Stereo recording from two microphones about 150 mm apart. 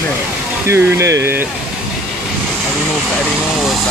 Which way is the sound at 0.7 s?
20° right (ahead or behind).